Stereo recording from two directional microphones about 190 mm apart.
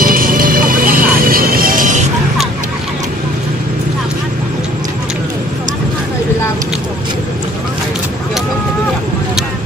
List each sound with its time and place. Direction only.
0.0 s music: 50° right (ahead or behind)